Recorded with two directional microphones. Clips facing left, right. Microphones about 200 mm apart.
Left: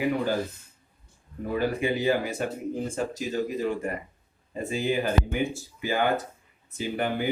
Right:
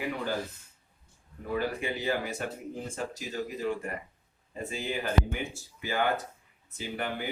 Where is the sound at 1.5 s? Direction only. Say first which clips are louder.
Left 5 dB; 15° left (ahead or behind).